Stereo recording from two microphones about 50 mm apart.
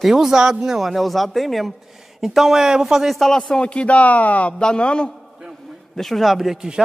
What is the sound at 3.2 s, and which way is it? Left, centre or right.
A man's voice, centre.